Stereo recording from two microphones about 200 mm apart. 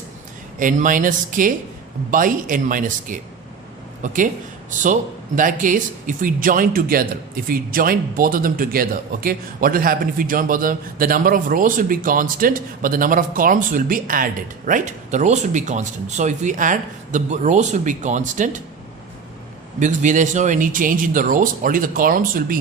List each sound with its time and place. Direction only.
0.6 s speech: 40° right (ahead or behind)
19.8 s speech: 40° right (ahead or behind)